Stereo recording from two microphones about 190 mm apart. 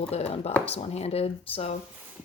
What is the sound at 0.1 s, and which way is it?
Speech, 35° left (ahead or behind).